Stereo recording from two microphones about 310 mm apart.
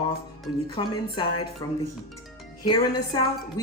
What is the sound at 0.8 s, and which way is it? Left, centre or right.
Speech, centre.